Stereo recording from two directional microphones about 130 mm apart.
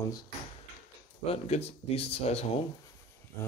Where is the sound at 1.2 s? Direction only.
50° left (ahead or behind).